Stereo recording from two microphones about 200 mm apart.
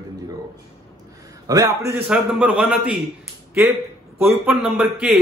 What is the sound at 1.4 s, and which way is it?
A man's voice, 15° right (ahead or behind).